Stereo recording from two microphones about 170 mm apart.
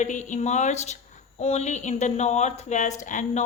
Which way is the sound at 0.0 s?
45° left (ahead or behind).